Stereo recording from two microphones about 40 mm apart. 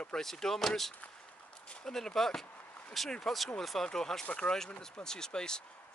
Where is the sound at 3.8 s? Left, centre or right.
Centre.